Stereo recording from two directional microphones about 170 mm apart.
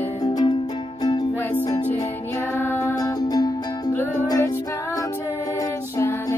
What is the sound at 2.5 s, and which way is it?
Music, 15° left (ahead or behind).